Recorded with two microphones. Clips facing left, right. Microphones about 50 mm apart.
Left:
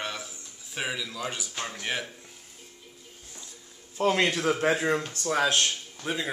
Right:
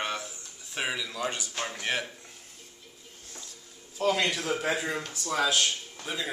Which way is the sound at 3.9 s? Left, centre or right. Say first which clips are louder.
Left 2 dB; left.